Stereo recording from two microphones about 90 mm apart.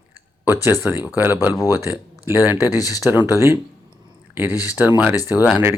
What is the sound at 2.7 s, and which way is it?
Speech, 45° left (ahead or behind).